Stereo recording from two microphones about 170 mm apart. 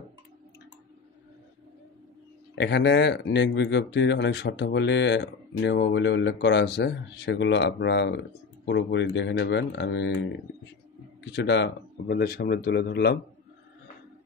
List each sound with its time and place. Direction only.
2.5 s speech: 90° left
11.3 s speech: 90° left